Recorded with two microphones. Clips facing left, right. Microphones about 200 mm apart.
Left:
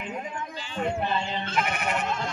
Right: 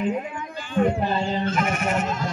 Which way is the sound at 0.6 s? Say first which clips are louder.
Right 9 dB; 50° right (ahead or behind).